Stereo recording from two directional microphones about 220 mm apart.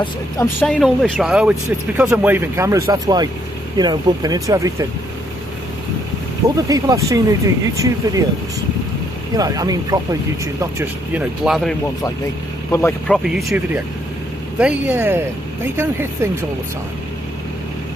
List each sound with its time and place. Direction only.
0.6 s speech: centre (ahead or behind); by 4.9 s 15° right (ahead or behind)
6.6 s speech: 15° right (ahead or behind)
9.3 s speech: 15° right (ahead or behind); by 11.7 s centre (ahead or behind)
12.7 s speech: 10° left (ahead or behind)
13.1 s speech: centre (ahead or behind)